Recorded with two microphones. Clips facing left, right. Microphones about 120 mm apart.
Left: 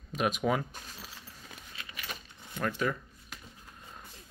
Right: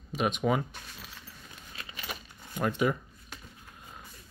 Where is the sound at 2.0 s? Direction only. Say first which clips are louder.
Right 2 dB; 15° right (ahead or behind).